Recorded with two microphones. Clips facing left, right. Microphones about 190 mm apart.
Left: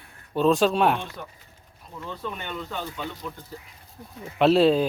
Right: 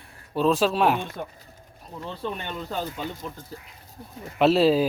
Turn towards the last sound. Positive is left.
turn(degrees=0)  # may be behind; listen again after turning